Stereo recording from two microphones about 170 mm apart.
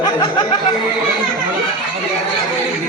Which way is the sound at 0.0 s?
25° left (ahead or behind).